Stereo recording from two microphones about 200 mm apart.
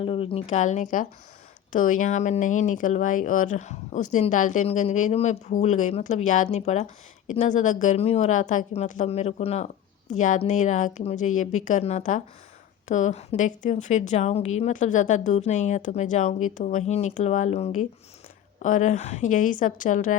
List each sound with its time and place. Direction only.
0.0 s speech: 25° left (ahead or behind)